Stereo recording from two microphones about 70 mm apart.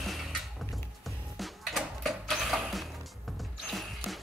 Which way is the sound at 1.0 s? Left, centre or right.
Centre.